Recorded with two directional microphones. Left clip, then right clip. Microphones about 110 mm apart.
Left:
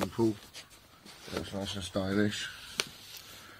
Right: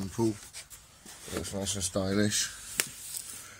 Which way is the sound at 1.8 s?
35° right (ahead or behind).